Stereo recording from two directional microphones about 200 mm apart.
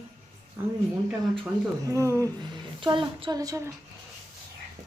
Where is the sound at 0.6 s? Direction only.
15° right (ahead or behind).